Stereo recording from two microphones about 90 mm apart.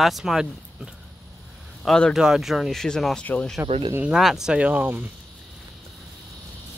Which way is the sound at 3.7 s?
90° right.